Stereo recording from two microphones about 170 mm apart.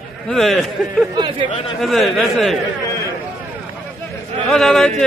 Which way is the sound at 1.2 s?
30° right (ahead or behind).